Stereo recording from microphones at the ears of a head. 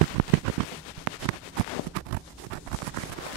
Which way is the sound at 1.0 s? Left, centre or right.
Right.